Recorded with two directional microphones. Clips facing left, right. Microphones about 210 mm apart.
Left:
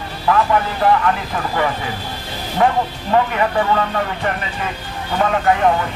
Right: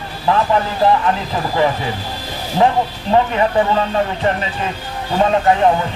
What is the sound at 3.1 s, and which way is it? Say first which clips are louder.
Speech: right 2 dB; 25° right (ahead or behind).